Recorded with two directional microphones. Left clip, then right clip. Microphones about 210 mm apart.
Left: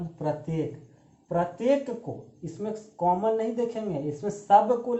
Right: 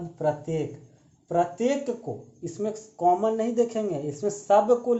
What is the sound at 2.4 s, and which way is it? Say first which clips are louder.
Speech: right 4 dB; 40° right (ahead or behind).